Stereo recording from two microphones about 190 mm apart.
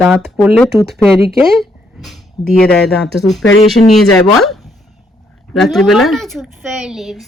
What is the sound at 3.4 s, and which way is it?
Speech, 90° left.